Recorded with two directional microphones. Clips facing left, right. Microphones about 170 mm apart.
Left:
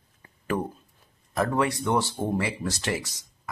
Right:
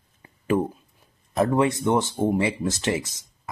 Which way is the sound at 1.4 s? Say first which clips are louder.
Right 4 dB; 20° right (ahead or behind).